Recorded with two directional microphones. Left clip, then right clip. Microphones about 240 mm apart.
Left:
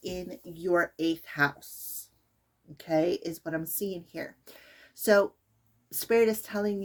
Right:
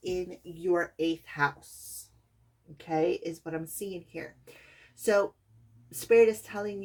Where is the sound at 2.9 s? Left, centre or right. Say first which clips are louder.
Left 1 dB; left.